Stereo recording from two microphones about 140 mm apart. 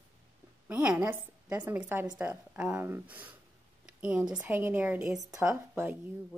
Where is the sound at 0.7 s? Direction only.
10° right (ahead or behind).